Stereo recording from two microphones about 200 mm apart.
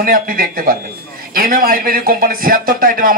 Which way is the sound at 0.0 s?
45° right (ahead or behind).